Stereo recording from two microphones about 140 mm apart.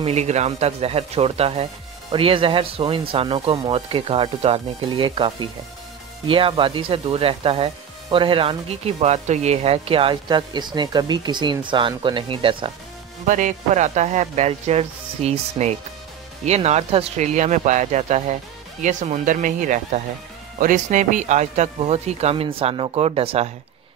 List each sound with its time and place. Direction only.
0.0 s speech: 50° right (ahead or behind)
13.3 s speech: 65° right (ahead or behind); by 23.5 s 45° right (ahead or behind)